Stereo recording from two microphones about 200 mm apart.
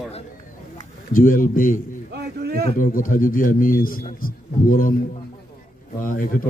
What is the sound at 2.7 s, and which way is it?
Speech, 45° left (ahead or behind).